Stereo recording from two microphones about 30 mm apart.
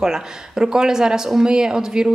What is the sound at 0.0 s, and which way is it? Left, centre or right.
Speech, right.